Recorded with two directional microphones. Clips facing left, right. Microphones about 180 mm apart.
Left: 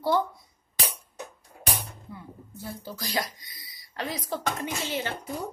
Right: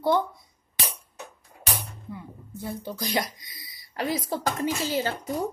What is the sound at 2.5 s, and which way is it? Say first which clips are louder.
Speech: right 5 dB; 20° right (ahead or behind).